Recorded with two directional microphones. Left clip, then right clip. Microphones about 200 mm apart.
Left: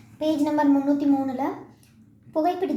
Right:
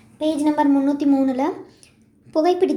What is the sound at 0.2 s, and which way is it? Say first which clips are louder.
A woman's voice: right 3 dB; 20° right (ahead or behind).